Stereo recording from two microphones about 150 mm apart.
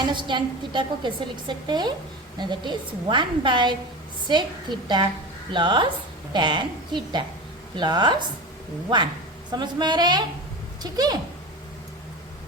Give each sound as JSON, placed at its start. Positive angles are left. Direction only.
{"t": 0.0, "sound": "a woman's voice", "side_deg": -30}
{"t": 9.5, "sound": "a woman's voice", "side_deg": -30}